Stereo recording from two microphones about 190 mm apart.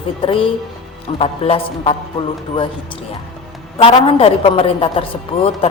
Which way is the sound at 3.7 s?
30° left (ahead or behind).